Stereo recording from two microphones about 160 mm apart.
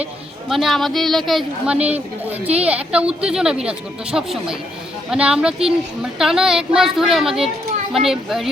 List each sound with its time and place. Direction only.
0.0 s speech: centre (ahead or behind)